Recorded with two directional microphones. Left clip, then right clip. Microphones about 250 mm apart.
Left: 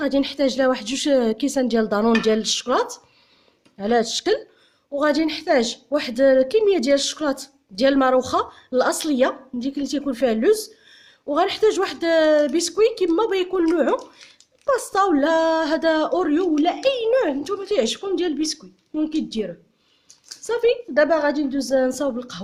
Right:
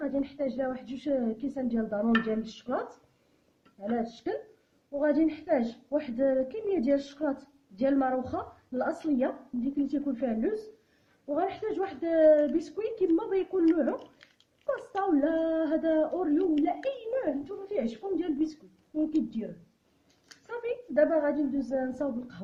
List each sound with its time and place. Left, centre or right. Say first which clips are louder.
0.0 s speech: left 11 dB; left
3.8 s a woman's voice: left 13 dB; left
20.5 s speech: left 14 dB; left